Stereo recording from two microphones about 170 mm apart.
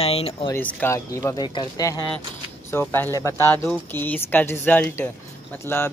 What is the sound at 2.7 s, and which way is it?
Speech, 10° left (ahead or behind).